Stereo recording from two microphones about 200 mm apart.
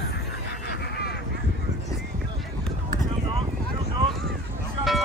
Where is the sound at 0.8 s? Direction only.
55° left (ahead or behind).